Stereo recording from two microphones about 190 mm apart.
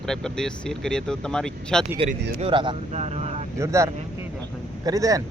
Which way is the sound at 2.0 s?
30° right (ahead or behind).